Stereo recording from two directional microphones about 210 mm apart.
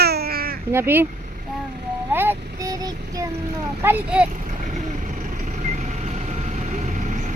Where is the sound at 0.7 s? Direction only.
10° right (ahead or behind).